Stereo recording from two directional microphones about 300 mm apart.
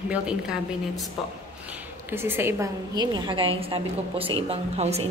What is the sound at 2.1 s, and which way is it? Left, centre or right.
A woman's voice, centre.